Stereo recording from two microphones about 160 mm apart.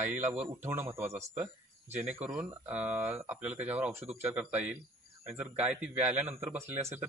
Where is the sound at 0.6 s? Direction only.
15° right (ahead or behind).